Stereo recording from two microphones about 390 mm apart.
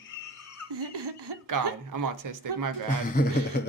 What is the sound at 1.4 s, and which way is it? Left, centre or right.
Speech, right.